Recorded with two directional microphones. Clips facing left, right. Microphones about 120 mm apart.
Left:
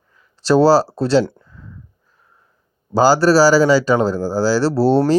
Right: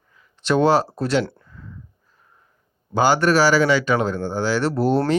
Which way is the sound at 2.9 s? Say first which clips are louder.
Left 5 dB; 35° left (ahead or behind).